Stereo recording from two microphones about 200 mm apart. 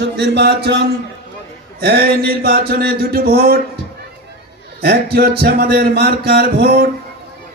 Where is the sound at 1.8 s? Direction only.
55° right (ahead or behind).